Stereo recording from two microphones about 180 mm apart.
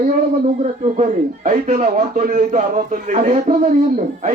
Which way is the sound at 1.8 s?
45° right (ahead or behind).